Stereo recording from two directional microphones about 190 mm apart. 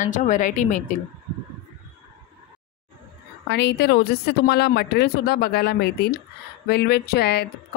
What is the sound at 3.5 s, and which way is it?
A woman's voice, 60° left (ahead or behind).